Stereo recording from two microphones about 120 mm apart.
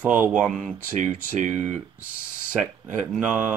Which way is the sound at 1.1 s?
90° right.